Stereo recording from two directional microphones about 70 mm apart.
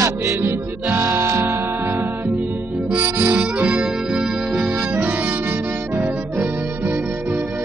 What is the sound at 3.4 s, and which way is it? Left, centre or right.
Harmonica, centre.